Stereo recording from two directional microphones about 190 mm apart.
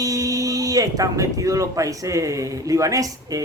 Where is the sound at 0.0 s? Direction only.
20° right (ahead or behind).